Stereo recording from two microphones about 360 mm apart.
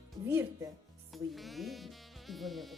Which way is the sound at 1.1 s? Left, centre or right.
Centre.